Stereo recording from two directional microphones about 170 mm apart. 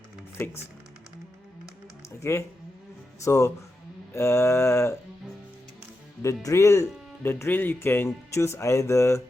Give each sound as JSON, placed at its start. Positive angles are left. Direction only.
{"t": 0.3, "sound": "speech", "side_deg": 15}
{"t": 2.3, "sound": "speech", "side_deg": 15}
{"t": 6.2, "sound": "speech", "side_deg": 20}